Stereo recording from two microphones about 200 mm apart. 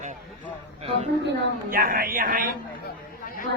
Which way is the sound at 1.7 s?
45° right (ahead or behind).